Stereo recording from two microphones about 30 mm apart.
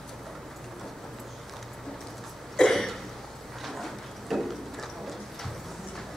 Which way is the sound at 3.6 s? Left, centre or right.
Centre.